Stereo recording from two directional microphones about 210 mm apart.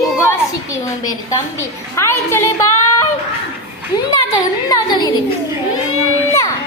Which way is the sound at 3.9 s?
20° left (ahead or behind).